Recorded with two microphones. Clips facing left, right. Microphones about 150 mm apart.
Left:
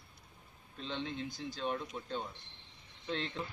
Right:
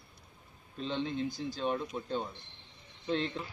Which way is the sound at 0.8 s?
10° right (ahead or behind).